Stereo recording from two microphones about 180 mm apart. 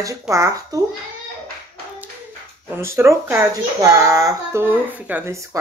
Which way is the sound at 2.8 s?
15° right (ahead or behind).